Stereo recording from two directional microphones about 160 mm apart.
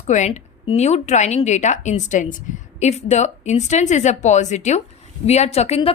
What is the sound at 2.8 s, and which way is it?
A woman's voice, 45° left (ahead or behind).